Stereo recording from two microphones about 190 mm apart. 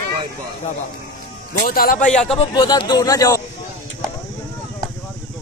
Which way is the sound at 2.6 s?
25° left (ahead or behind).